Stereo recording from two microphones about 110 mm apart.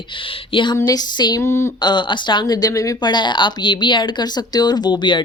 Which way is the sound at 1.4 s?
25° left (ahead or behind).